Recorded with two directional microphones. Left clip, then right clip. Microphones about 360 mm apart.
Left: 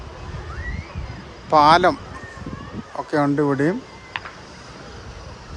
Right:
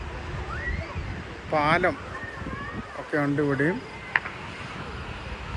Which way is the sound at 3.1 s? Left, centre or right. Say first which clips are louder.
Left 5 dB; centre.